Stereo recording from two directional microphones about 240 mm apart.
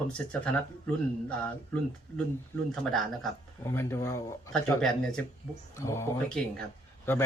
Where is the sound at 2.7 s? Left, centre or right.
Centre.